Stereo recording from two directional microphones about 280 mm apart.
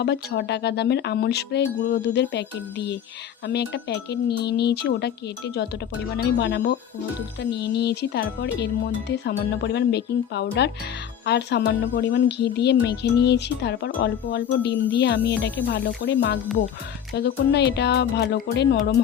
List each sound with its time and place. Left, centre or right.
0.0 s speech: left
6.4 s speech: left